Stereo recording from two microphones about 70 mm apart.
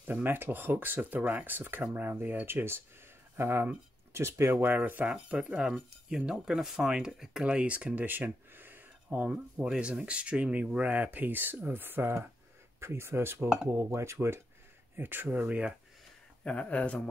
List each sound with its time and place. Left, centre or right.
0.0 s speech: right
4.6 s speech: right
16.4 s speech: centre